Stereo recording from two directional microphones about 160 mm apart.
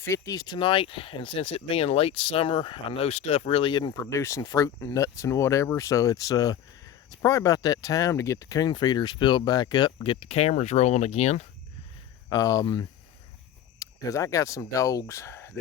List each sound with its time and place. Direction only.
0.0 s speech: 20° left (ahead or behind)
4.0 s speech: 20° left (ahead or behind); by 11.4 s 45° left (ahead or behind)
12.3 s speech: 20° left (ahead or behind)